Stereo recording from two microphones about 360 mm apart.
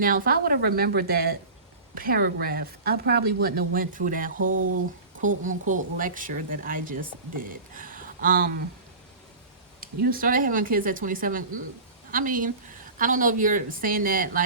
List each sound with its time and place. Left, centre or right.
0.0 s speech: right
9.8 s speech: right